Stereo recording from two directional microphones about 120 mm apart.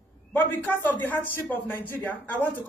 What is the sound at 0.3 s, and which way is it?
A man's voice, 15° left (ahead or behind).